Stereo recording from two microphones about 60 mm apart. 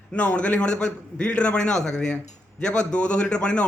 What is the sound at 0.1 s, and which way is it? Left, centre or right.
A man's voice, left.